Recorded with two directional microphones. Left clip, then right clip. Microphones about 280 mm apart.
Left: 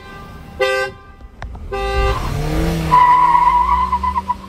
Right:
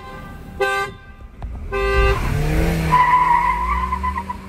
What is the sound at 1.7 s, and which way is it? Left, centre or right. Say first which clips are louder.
Vehicle: right 1 dB; left.